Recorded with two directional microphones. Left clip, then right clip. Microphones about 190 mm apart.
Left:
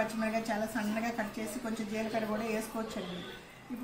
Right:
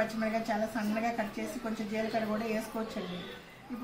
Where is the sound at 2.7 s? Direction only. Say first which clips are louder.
Right 1 dB; centre (ahead or behind).